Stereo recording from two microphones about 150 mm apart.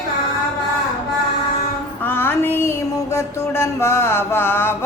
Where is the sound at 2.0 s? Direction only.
15° left (ahead or behind).